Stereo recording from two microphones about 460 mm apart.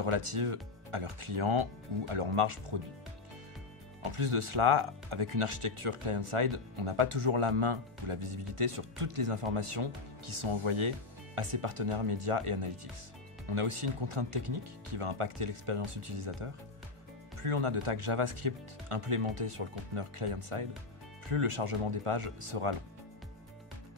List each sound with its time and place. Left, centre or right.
0.0 s speech: right
4.0 s speech: right